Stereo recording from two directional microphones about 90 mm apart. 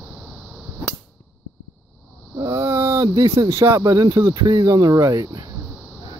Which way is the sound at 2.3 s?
35° right (ahead or behind).